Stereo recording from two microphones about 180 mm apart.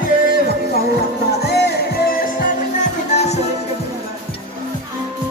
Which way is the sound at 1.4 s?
65° left (ahead or behind).